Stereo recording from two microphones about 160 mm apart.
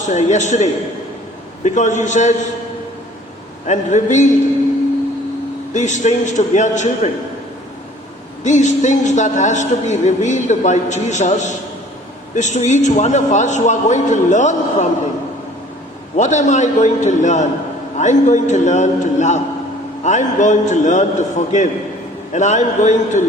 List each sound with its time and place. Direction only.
0.0 s a man's voice: 45° left (ahead or behind)
3.7 s a man's voice: 50° left (ahead or behind)
5.7 s a man's voice: 50° left (ahead or behind)
8.4 s a man's voice: 50° left (ahead or behind)
16.1 s a man's voice: 50° left (ahead or behind)